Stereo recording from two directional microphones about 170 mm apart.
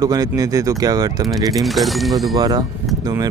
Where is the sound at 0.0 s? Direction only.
20° right (ahead or behind).